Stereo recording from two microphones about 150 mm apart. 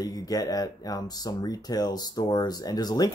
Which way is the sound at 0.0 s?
25° left (ahead or behind).